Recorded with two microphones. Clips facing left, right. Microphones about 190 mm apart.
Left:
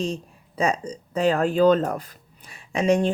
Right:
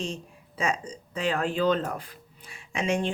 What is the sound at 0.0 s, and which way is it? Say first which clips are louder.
Speech: left 6 dB; 35° left (ahead or behind).